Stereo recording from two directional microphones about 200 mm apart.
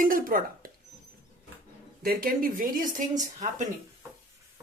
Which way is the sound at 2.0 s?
45° right (ahead or behind).